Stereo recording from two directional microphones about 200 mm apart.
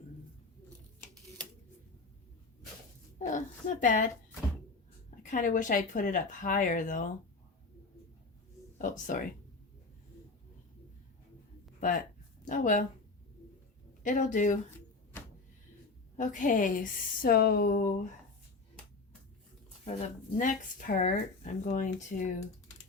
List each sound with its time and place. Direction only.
3.2 s a woman's voice: 40° left (ahead or behind)
5.2 s speech: 40° left (ahead or behind)
8.8 s speech: 40° left (ahead or behind)
11.8 s speech: 45° left (ahead or behind)
14.0 s speech: 40° left (ahead or behind)
16.1 s a woman's voice: 40° left (ahead or behind)
19.8 s speech: 35° left (ahead or behind)